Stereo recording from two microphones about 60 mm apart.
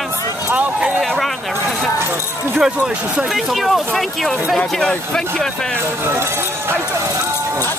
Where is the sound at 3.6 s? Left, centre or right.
Centre.